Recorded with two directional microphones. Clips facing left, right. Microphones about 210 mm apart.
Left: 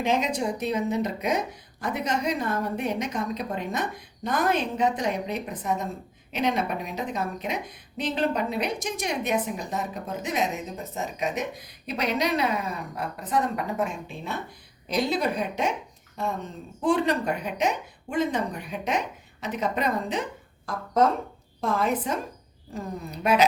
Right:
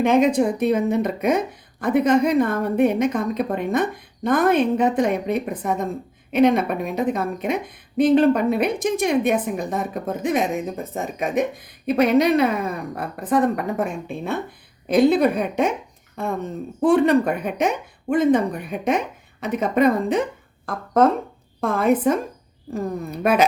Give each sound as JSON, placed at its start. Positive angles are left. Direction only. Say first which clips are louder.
{"t": 0.0, "sound": "a woman's voice", "louder": "right 9 dB", "side_deg": -55}
{"t": 16.8, "sound": "a woman's voice", "louder": "right 7 dB", "side_deg": -55}